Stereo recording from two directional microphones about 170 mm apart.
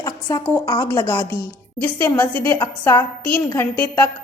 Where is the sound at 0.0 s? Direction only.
20° left (ahead or behind).